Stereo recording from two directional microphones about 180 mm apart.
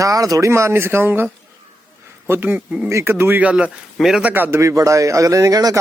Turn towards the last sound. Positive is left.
turn(degrees=-20)  # may be behind; listen again after turning